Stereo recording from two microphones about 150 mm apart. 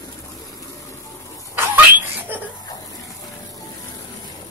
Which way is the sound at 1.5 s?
15° right (ahead or behind).